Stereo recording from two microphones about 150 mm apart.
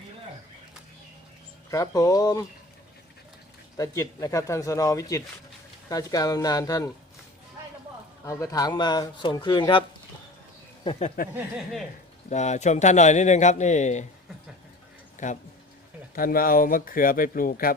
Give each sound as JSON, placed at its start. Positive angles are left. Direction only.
{"t": 1.7, "sound": "speech", "side_deg": 25}
{"t": 3.8, "sound": "speech", "side_deg": 20}
{"t": 8.2, "sound": "speech", "side_deg": 20}
{"t": 11.2, "sound": "speech", "side_deg": 65}
{"t": 12.3, "sound": "speech", "side_deg": 50}
{"t": 15.2, "sound": "speech", "side_deg": 55}
{"t": 16.1, "sound": "speech", "side_deg": 75}